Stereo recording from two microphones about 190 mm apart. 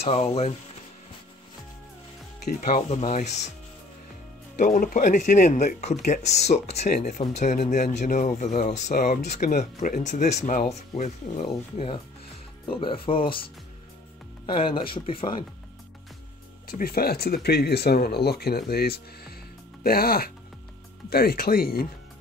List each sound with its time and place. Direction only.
0.0 s speech: 30° left (ahead or behind)
2.4 s speech: 35° left (ahead or behind)
4.6 s speech: 45° left (ahead or behind)
11.4 s speech: 30° left (ahead or behind)
16.6 s speech: 50° left (ahead or behind)